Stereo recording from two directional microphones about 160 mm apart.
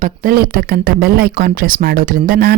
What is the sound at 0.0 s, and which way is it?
A woman's voice, 60° right (ahead or behind).